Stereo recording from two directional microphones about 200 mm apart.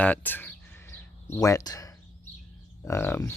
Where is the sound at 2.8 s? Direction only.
10° left (ahead or behind).